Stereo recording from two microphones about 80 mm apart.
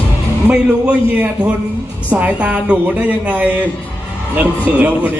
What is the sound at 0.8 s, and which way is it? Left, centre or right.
A woman's voice, centre.